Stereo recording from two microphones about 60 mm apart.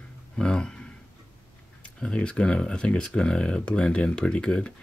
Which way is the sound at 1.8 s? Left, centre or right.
Centre.